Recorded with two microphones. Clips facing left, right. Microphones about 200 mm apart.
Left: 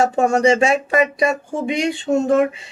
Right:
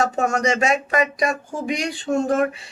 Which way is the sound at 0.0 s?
30° left (ahead or behind).